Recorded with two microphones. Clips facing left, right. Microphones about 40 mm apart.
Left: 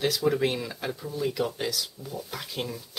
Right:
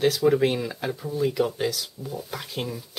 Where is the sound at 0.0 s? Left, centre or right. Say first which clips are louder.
Right 5 dB; centre.